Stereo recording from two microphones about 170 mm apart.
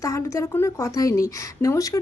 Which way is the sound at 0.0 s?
15° left (ahead or behind).